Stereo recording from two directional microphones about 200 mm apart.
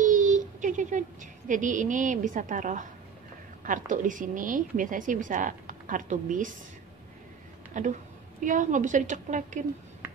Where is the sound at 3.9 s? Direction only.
40° right (ahead or behind).